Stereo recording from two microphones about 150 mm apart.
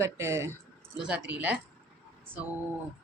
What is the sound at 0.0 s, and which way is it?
Speech, 20° right (ahead or behind).